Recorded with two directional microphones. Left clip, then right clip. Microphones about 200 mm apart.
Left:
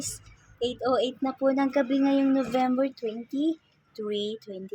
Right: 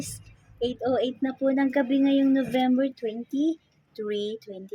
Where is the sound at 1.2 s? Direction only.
30° right (ahead or behind).